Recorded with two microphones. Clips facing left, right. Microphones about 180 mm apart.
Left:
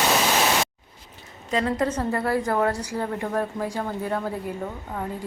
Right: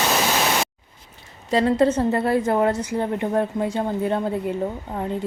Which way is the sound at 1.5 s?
30° right (ahead or behind).